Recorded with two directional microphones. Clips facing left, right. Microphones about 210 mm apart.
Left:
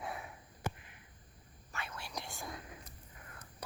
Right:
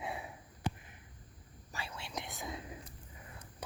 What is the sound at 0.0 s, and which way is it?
Sniff, 25° right (ahead or behind).